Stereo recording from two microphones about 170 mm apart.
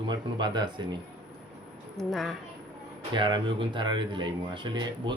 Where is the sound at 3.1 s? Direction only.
30° right (ahead or behind).